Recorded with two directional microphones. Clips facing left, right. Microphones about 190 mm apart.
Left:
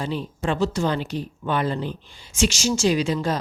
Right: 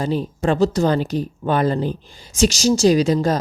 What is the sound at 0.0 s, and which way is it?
Speech, 40° right (ahead or behind).